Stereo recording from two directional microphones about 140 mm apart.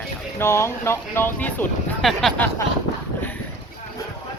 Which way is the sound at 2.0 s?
Centre (ahead or behind).